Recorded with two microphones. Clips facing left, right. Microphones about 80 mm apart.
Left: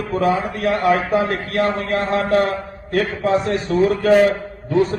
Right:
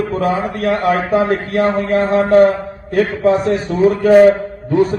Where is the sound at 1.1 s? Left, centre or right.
Right.